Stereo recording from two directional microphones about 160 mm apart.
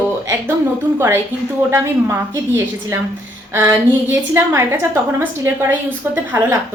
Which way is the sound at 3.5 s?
15° right (ahead or behind).